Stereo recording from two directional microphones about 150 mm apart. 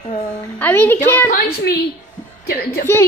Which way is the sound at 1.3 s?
90° left.